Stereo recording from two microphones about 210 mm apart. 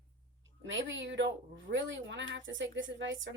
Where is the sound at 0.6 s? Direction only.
65° right (ahead or behind).